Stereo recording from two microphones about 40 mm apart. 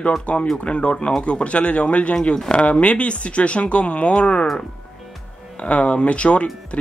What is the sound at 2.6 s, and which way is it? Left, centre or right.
Speech, left.